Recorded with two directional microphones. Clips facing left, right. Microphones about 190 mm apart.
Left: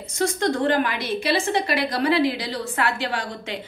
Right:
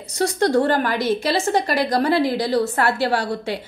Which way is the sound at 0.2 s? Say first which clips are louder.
Right 4 dB; 40° right (ahead or behind).